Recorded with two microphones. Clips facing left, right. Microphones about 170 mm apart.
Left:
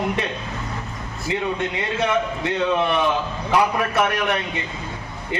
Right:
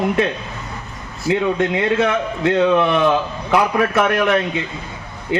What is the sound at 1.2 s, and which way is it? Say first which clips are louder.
A man's voice: right 7 dB; 60° right (ahead or behind).